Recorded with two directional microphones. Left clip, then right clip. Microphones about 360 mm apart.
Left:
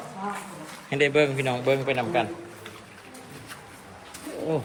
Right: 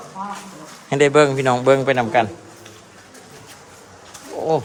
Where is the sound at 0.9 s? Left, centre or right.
Right.